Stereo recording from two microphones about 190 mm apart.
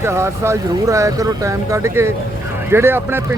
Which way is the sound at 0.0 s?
15° right (ahead or behind).